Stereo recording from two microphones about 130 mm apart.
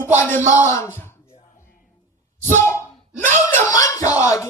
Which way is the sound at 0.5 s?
20° left (ahead or behind).